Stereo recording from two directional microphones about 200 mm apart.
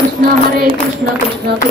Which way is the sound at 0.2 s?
45° right (ahead or behind).